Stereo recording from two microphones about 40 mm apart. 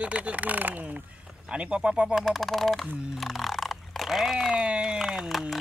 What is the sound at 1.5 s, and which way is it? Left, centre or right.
Speech, right.